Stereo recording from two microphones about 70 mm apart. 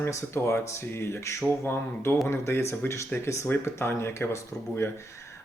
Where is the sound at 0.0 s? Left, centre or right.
Left.